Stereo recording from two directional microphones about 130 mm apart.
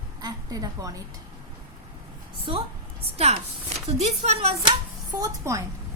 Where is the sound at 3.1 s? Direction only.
55° right (ahead or behind).